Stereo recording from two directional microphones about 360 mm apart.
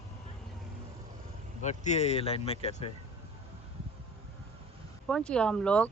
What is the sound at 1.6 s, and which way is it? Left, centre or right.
Speech, centre.